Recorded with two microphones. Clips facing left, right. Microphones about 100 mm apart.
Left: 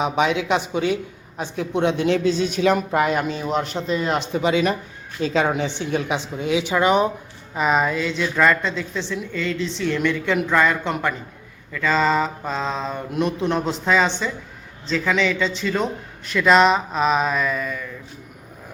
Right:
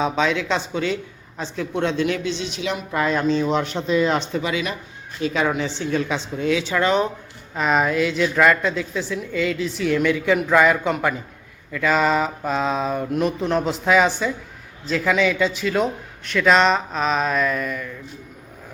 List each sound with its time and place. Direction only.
0.0 s a woman's voice: 15° left (ahead or behind)
2.1 s speech: 40° left (ahead or behind)
3.3 s a woman's voice: 5° left (ahead or behind)
4.3 s a woman's voice: 25° left (ahead or behind)
7.5 s a woman's voice: 5° left (ahead or behind)